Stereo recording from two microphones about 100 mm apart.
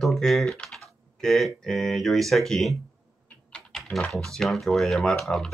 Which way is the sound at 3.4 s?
10° left (ahead or behind).